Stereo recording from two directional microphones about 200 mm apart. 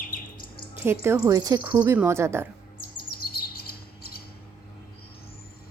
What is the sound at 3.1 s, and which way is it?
Bird, 50° left (ahead or behind).